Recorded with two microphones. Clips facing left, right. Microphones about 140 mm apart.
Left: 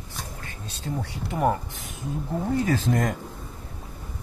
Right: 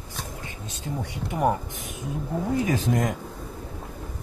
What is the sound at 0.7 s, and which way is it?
Speech, 15° right (ahead or behind).